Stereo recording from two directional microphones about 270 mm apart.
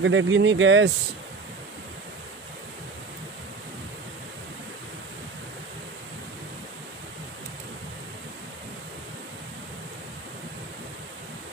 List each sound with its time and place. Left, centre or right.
0.0 s speech: right